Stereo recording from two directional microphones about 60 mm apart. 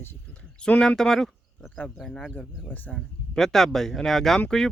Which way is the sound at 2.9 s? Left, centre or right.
Centre.